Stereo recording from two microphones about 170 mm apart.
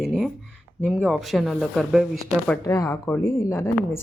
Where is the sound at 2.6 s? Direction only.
20° left (ahead or behind).